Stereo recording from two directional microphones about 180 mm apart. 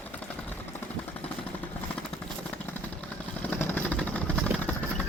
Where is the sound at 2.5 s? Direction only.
10° left (ahead or behind).